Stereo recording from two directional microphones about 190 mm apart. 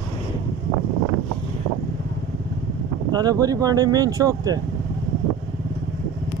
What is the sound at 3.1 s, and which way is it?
Speech, 20° right (ahead or behind).